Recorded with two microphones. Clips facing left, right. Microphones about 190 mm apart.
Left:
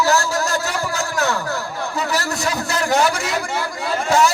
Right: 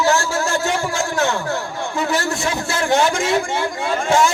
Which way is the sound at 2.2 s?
40° left (ahead or behind).